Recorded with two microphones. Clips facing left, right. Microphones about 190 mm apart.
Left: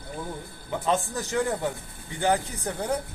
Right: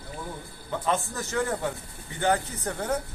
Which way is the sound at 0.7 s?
15° left (ahead or behind).